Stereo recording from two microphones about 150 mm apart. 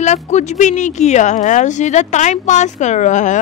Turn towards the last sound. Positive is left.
turn(degrees=55)  # may be behind; listen again after turning